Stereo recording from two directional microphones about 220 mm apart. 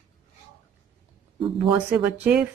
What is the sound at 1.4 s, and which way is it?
Speech, 5° right (ahead or behind).